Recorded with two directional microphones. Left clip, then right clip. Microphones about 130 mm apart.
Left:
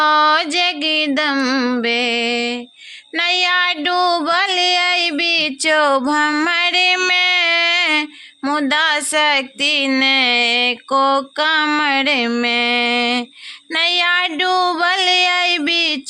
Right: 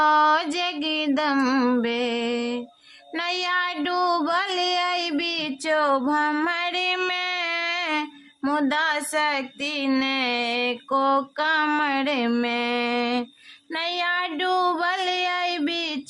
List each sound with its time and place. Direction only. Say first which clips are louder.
0.0 s a sound: left 5 dB; 15° left (ahead or behind)
1.4 s female singing: left 4 dB; 5° left (ahead or behind)
1.8 s music: left 8 dB; 20° left (ahead or behind)
3.2 s child singing: left 9 dB; 15° left (ahead or behind)
5.6 s music: left 6 dB; 35° left (ahead or behind)
8.4 s speech: left 7 dB; 20° left (ahead or behind)